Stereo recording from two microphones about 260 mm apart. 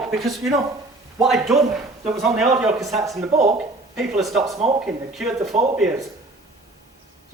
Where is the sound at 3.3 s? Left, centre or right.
Right.